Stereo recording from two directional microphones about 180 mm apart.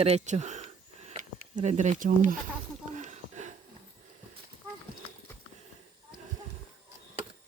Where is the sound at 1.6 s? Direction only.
40° right (ahead or behind).